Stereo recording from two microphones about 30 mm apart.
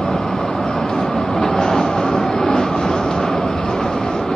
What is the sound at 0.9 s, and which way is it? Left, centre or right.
Vehicle, centre.